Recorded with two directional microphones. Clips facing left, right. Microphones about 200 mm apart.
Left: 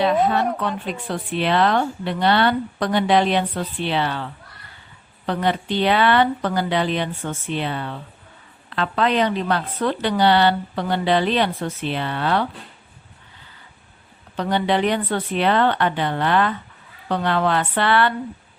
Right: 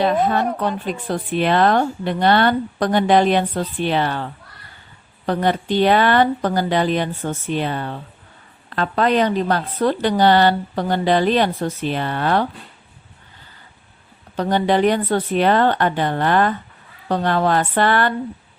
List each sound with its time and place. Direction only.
0.9 s a woman's voice: 40° right (ahead or behind)
14.3 s a woman's voice: 45° right (ahead or behind)